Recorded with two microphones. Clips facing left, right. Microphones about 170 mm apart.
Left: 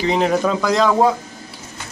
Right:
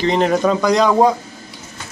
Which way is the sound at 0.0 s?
5° left (ahead or behind).